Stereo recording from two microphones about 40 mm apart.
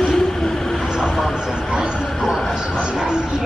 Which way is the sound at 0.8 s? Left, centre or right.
Centre.